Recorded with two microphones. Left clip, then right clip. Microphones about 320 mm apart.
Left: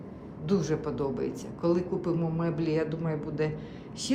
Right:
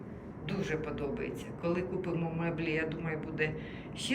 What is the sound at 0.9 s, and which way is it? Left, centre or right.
Speech, centre.